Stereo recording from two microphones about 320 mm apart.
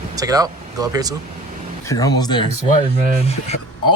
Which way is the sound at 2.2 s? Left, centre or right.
Centre.